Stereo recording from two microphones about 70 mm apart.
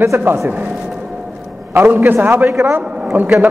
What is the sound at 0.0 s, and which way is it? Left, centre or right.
Speech, right.